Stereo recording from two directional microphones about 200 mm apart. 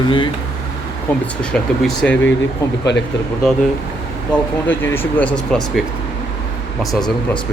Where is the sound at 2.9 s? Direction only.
60° left (ahead or behind).